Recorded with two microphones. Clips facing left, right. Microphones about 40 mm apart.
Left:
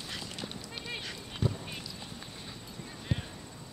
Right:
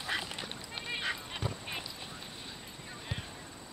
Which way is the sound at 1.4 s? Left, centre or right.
Centre.